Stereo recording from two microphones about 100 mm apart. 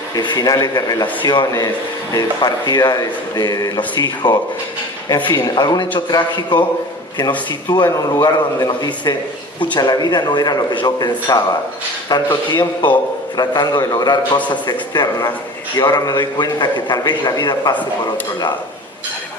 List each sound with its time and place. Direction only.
0.2 s speech: 45° left (ahead or behind)
1.2 s a man's voice: 50° left (ahead or behind)
1.5 s speech: 35° left (ahead or behind)
3.8 s a man's voice: 50° left (ahead or behind)